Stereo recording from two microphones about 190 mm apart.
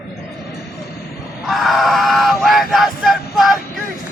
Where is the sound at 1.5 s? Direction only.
Centre (ahead or behind).